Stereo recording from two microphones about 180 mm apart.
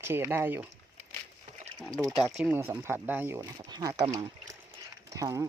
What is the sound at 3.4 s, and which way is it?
Speech, 25° right (ahead or behind).